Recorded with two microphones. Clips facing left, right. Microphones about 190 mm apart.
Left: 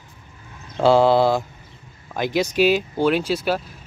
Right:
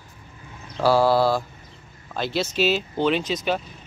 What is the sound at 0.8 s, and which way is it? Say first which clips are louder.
Speech: left 3 dB; 20° left (ahead or behind).